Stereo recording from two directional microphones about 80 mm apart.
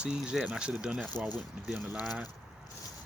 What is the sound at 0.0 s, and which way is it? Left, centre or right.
Speech, centre.